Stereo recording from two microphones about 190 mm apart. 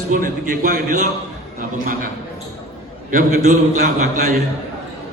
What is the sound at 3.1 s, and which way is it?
A man's voice, 40° right (ahead or behind).